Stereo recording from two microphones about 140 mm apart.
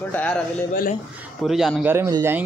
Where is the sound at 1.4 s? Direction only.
Centre (ahead or behind).